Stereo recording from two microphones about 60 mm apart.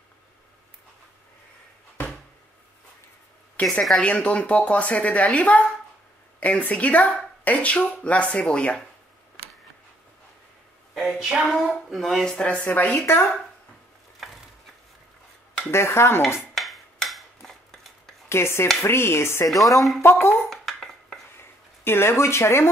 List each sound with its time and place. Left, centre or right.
3.6 s a woman's voice: left
11.0 s a woman's voice: centre
12.6 s speech: left
12.9 s speech: left
15.7 s speech: left
16.5 s cutlery: centre
18.3 s speech: left
19.5 s speech: centre
20.0 s speech: left
20.4 s a sound: centre
21.4 s a sound: left